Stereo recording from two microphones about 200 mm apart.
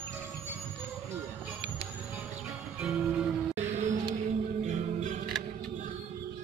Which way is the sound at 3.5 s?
35° right (ahead or behind).